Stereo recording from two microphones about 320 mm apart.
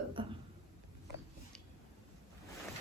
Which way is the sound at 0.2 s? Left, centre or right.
Centre.